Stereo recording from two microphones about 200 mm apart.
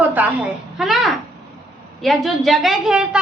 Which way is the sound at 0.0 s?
10° right (ahead or behind).